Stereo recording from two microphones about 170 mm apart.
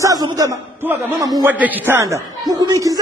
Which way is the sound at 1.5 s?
10° right (ahead or behind).